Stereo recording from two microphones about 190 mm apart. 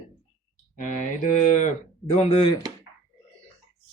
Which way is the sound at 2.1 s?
30° left (ahead or behind).